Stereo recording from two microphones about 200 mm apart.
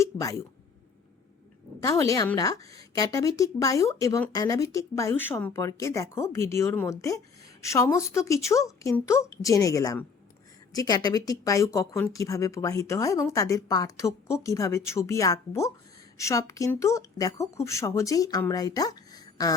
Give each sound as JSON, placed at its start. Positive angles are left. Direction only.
{"t": 0.0, "sound": "speech", "side_deg": 15}
{"t": 1.8, "sound": "a woman's voice", "side_deg": 15}